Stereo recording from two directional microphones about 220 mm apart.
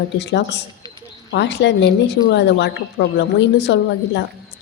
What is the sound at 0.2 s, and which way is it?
A woman's voice, 50° left (ahead or behind).